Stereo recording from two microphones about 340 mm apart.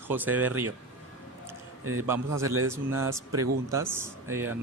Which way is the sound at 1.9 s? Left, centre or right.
Centre.